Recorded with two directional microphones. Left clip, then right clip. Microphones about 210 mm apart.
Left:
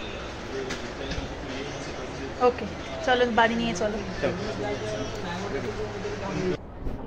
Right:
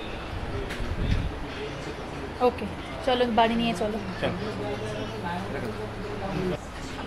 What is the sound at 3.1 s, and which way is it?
Speech, 10° right (ahead or behind).